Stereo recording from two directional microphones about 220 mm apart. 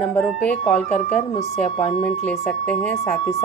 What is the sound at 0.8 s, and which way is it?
Speech, 30° left (ahead or behind).